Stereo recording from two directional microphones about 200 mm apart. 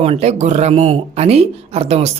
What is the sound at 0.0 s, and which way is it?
Speech, 30° right (ahead or behind).